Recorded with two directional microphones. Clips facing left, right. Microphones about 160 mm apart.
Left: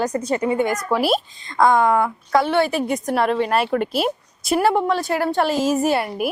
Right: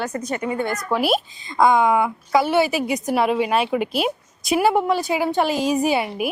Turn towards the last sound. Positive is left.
turn(degrees=0)  # may be behind; listen again after turning